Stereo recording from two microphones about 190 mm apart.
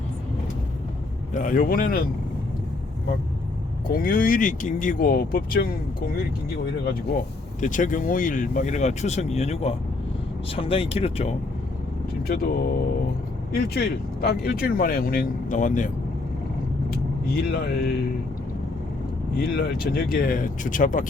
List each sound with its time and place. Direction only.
1.3 s speech: 45° left (ahead or behind)
3.8 s speech: 50° left (ahead or behind)
7.6 s speech: 40° left (ahead or behind)
12.3 s speech: 50° left (ahead or behind)
17.2 s speech: 55° left (ahead or behind)
19.4 s speech: 50° left (ahead or behind)